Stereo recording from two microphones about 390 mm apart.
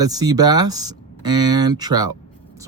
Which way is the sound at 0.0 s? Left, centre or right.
Centre.